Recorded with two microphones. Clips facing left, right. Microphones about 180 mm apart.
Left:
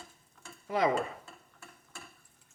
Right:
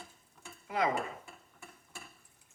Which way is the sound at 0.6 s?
30° left (ahead or behind).